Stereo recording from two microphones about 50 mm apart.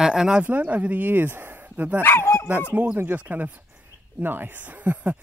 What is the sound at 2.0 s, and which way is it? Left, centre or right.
Speech, left.